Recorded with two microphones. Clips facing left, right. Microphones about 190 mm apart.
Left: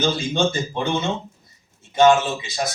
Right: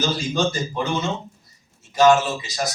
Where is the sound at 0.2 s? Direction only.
25° left (ahead or behind).